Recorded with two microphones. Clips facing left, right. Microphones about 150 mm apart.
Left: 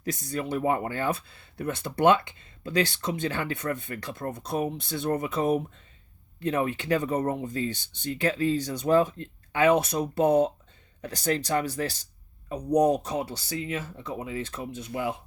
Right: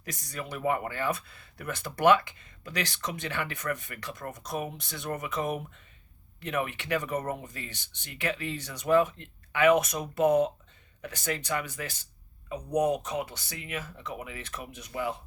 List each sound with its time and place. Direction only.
0.0 s speech: 30° left (ahead or behind)